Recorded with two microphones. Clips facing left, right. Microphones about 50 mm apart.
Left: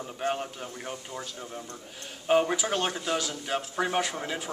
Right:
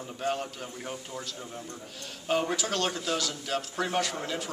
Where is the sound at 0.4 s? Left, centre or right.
Centre.